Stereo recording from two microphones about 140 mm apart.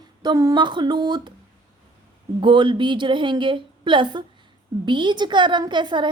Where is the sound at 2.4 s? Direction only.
35° right (ahead or behind).